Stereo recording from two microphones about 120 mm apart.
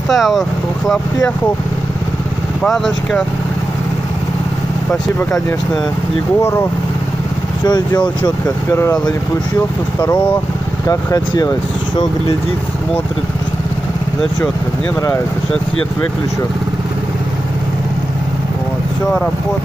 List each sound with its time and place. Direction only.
0.1 s speech: centre (ahead or behind)
2.6 s speech: 5° left (ahead or behind)
7.6 s speech: 35° left (ahead or behind)
10.9 s speech: 30° left (ahead or behind)